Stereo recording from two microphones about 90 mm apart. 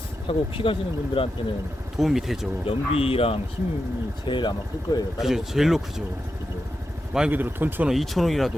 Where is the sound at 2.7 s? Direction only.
90° left.